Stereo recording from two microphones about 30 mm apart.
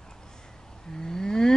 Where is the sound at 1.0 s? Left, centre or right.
Centre.